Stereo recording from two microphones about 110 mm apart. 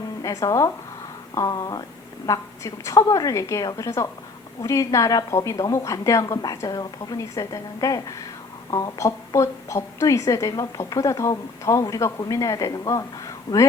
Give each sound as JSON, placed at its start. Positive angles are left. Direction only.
{"t": 0.2, "sound": "a woman's voice", "side_deg": 35}